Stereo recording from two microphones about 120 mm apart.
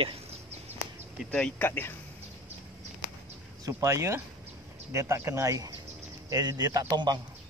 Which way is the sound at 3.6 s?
25° right (ahead or behind).